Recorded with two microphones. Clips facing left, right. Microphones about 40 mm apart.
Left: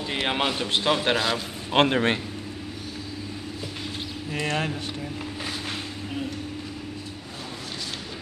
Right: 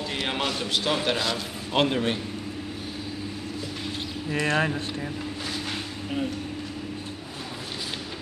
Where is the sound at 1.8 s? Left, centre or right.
Left.